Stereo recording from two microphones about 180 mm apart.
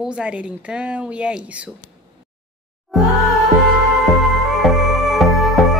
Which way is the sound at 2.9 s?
Centre (ahead or behind).